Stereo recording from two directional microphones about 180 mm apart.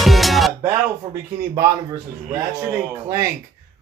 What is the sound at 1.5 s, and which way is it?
A man's voice, 20° right (ahead or behind).